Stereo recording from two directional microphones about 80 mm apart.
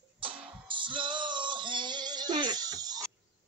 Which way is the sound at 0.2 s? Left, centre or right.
Right.